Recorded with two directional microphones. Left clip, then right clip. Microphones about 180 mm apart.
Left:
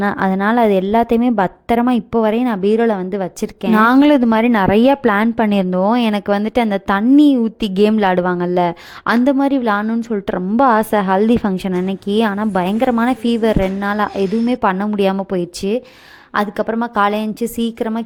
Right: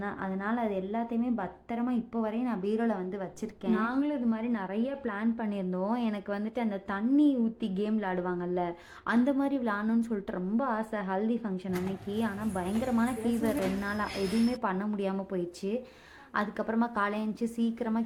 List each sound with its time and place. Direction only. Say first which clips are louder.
0.0 s a woman's voice: left 18 dB; 55° left (ahead or behind)